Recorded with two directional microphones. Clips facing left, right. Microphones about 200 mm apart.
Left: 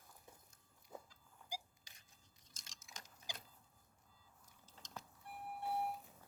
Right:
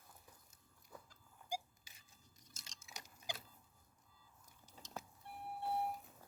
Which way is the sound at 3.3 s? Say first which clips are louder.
Right 5 dB; 60° right (ahead or behind).